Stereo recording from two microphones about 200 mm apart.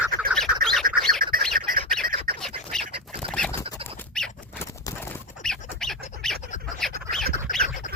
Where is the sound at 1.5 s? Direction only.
45° right (ahead or behind).